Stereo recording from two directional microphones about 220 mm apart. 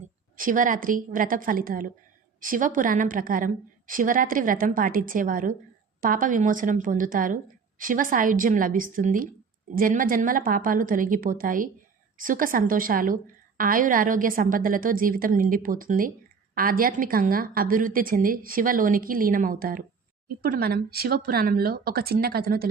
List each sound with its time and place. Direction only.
0.3 s a woman's voice: 35° right (ahead or behind)